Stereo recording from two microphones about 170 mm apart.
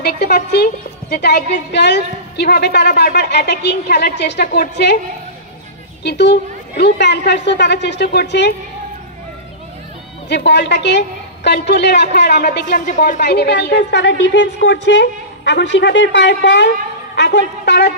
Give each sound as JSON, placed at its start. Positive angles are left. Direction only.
{"t": 0.0, "sound": "a woman's voice", "side_deg": 65}
{"t": 6.0, "sound": "a woman's voice", "side_deg": 90}
{"t": 10.2, "sound": "a woman's voice", "side_deg": 85}
{"t": 13.2, "sound": "a woman's voice", "side_deg": 75}